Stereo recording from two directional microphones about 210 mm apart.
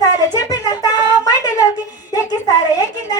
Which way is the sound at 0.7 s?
20° left (ahead or behind).